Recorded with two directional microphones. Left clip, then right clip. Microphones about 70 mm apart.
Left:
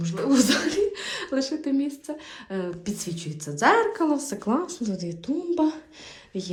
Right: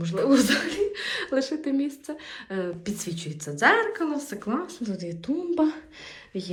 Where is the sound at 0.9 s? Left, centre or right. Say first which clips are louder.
Right 2 dB; left.